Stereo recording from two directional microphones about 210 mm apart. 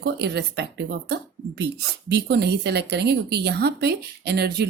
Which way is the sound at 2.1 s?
55° right (ahead or behind).